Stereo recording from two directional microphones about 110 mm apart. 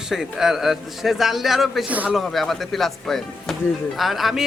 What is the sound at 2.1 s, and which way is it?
Speech, centre (ahead or behind).